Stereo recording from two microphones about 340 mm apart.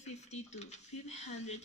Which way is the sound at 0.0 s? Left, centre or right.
Centre.